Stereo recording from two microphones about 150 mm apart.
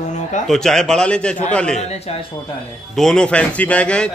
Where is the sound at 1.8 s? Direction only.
45° left (ahead or behind).